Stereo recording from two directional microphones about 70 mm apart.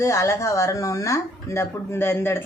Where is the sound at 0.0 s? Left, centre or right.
Left.